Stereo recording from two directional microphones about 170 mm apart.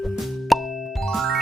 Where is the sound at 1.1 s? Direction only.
Centre (ahead or behind).